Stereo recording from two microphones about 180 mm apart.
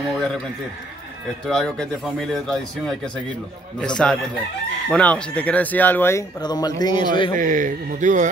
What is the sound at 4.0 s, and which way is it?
A man's voice, 5° left (ahead or behind).